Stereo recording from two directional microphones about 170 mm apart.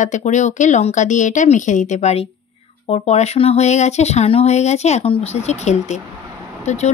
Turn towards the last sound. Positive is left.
turn(degrees=40)  # may be behind; listen again after turning